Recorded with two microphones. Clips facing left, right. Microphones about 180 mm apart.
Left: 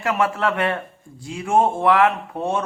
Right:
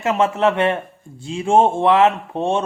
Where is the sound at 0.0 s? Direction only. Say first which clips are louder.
Right 4 dB; 25° right (ahead or behind).